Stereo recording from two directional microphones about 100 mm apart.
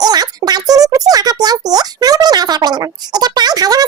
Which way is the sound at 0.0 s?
40° right (ahead or behind).